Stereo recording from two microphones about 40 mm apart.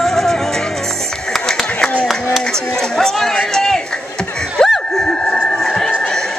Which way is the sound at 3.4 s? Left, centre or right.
Centre.